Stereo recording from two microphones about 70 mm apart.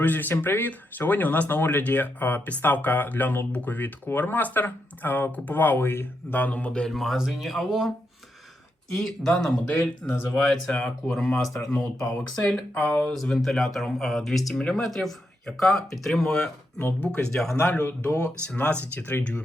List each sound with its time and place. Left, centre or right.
0.0 s speech: left
6.8 s speech: centre
9.0 s speech: centre
12.7 s speech: left
13.1 s speech: centre
14.5 s speech: centre
14.8 s speech: centre
16.7 s speech: left
17.1 s speech: centre
17.6 s speech: left